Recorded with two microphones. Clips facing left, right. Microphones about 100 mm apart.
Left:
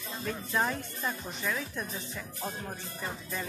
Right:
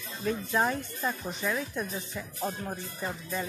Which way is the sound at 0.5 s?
10° right (ahead or behind).